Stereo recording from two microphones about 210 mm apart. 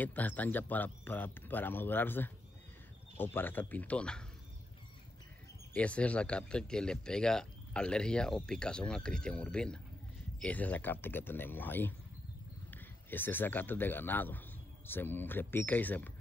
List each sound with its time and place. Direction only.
0.0 s speech: 10° left (ahead or behind)
5.7 s speech: 5° left (ahead or behind)